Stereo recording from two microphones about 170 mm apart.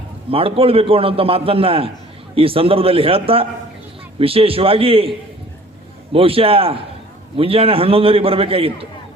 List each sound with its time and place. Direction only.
0.3 s a man's voice: 35° right (ahead or behind)
6.1 s a man's voice: 35° right (ahead or behind)